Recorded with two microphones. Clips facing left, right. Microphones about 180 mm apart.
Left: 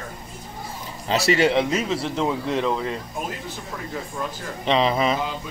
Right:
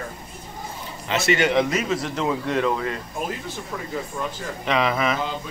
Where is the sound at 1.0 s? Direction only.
35° left (ahead or behind).